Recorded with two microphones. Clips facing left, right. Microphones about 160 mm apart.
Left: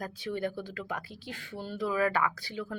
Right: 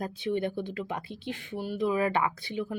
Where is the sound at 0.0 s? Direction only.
25° right (ahead or behind).